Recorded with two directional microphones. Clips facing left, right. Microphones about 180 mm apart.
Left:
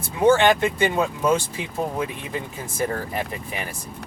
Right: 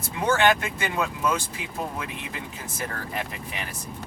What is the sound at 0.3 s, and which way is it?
Speech, 25° left (ahead or behind).